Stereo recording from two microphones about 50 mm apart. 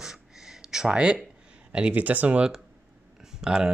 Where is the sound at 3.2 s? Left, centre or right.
Centre.